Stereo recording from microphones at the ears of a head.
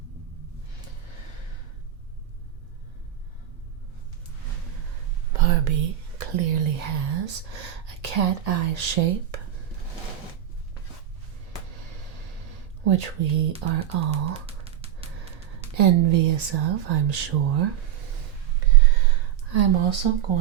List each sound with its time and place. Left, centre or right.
4.9 s speech: right
11.8 s a sound: right
15.4 s speech: right
19.5 s speech: right